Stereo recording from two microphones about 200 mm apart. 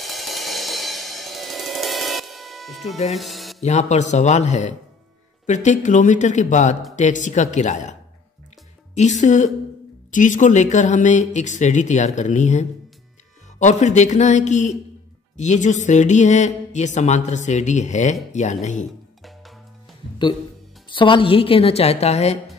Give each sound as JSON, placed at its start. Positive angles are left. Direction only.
{"t": 0.0, "sound": "music", "side_deg": 0}
{"t": 3.6, "sound": "speech", "side_deg": 35}
{"t": 8.9, "sound": "speech", "side_deg": 35}
{"t": 20.9, "sound": "a woman's voice", "side_deg": 25}